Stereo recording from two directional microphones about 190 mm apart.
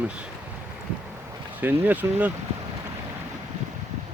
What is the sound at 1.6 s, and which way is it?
Speech, 10° right (ahead or behind).